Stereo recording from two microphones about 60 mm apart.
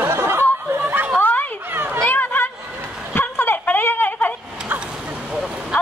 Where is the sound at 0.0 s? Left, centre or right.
Right.